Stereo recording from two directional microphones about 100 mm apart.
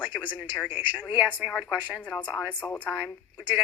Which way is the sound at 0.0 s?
15° right (ahead or behind).